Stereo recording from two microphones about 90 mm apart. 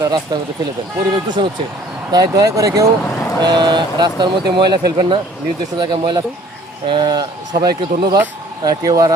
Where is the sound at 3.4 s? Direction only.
50° right (ahead or behind).